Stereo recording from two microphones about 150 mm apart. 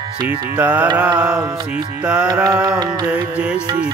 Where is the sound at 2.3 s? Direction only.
25° right (ahead or behind).